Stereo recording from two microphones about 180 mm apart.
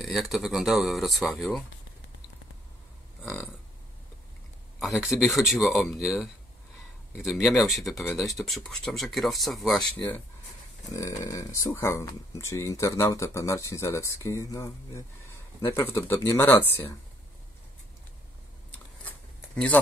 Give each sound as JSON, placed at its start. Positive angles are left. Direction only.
{"t": 0.0, "sound": "speech", "side_deg": 0}
{"t": 3.2, "sound": "burping", "side_deg": 10}
{"t": 4.7, "sound": "speech", "side_deg": 0}
{"t": 10.9, "sound": "speech", "side_deg": 15}
{"t": 19.0, "sound": "a sound", "side_deg": 5}